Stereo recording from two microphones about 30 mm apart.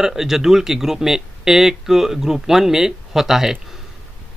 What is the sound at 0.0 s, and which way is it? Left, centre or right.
Speech, centre.